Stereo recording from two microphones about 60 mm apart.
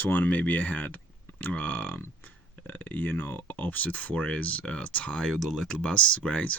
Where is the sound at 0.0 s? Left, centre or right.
Left.